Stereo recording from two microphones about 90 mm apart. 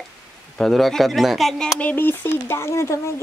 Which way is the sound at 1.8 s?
25° left (ahead or behind).